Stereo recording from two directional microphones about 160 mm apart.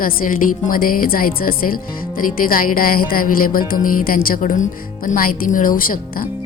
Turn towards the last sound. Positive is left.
turn(degrees=60)  # may be behind; listen again after turning